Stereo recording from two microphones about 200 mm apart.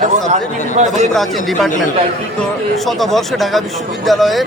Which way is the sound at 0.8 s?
35° right (ahead or behind).